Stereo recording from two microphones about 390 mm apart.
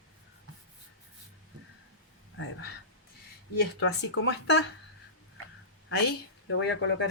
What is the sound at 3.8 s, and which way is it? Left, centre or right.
Speech, left.